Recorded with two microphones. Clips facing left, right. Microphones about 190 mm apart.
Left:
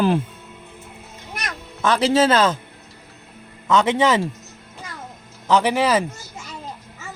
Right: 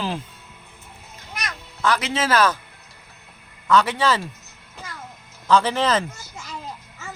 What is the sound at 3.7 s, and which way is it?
Speech, 20° left (ahead or behind).